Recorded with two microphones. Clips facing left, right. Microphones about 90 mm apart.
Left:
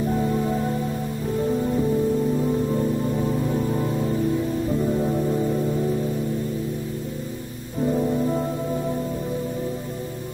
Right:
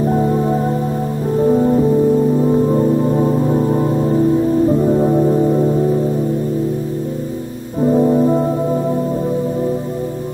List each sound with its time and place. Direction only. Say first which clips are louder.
0.1 s music: right 7 dB; 35° right (ahead or behind)
7.8 s music: right 9 dB; 35° right (ahead or behind)